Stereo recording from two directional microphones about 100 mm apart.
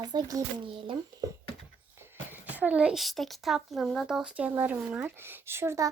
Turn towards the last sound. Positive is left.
turn(degrees=-25)  # may be behind; listen again after turning